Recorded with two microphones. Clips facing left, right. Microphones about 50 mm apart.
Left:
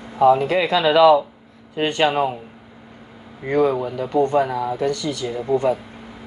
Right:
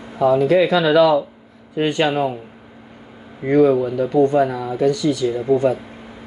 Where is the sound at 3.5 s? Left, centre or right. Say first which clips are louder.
Right 4 dB; left.